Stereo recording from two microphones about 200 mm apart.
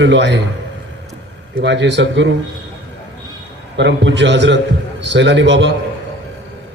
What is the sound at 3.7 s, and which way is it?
A man's voice, 60° right (ahead or behind).